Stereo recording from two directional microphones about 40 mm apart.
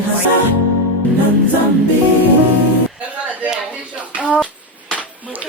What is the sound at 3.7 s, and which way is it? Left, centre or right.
Clapping, right.